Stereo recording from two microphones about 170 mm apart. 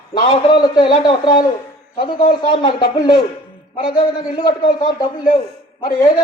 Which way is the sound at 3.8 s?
25° left (ahead or behind).